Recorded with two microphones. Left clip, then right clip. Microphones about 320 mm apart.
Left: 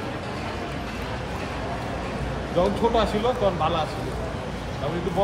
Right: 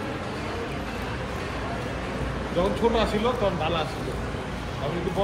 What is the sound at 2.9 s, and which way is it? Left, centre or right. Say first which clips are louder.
Speech: left 2 dB; left.